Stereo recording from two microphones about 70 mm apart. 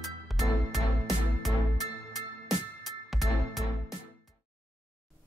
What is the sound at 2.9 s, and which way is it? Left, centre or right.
Music, centre.